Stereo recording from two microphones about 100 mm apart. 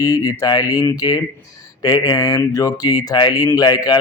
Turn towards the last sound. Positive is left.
turn(degrees=40)  # may be behind; listen again after turning